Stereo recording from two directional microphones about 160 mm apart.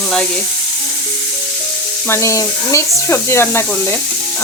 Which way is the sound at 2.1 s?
20° left (ahead or behind).